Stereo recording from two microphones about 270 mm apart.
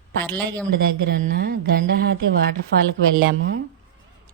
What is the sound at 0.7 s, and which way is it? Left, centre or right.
Speech, right.